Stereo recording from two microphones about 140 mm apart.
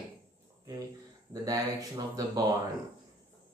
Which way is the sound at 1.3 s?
25° right (ahead or behind).